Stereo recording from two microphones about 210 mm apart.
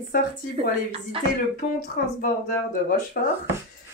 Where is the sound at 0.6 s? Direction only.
25° right (ahead or behind).